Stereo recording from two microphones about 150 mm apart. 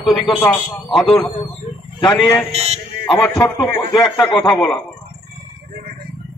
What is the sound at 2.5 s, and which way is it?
Speech, 45° right (ahead or behind).